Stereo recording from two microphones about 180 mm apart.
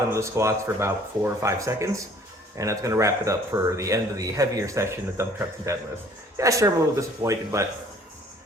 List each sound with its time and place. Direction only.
0.1 s speech: 15° right (ahead or behind)